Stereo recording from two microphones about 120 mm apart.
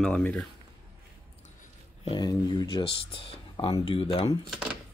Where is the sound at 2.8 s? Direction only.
50° left (ahead or behind).